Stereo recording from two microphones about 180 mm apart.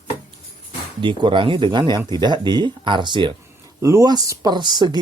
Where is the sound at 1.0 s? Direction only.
25° right (ahead or behind).